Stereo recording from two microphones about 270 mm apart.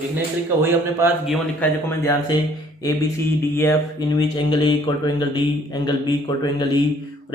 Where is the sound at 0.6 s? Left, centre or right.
Centre.